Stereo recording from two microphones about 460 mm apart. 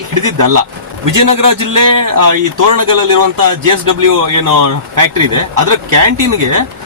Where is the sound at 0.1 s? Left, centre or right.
Right.